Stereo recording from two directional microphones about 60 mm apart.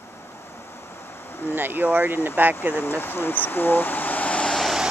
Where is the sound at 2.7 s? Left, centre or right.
Left.